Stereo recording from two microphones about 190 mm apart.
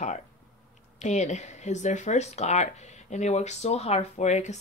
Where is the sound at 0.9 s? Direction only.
40° left (ahead or behind).